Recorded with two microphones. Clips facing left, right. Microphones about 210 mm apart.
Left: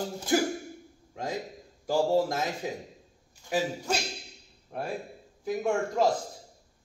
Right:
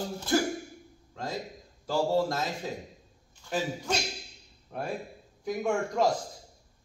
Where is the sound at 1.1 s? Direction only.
15° left (ahead or behind).